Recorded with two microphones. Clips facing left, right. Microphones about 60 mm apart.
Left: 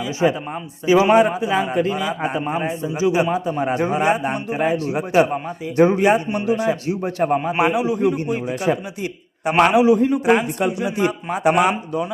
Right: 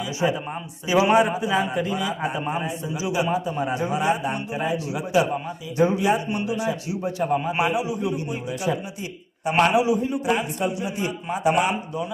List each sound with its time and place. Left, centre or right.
0.0 s a man's voice: left
10.2 s a man's voice: left